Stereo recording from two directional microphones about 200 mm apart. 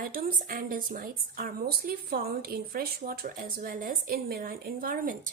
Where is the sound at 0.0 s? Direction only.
45° right (ahead or behind).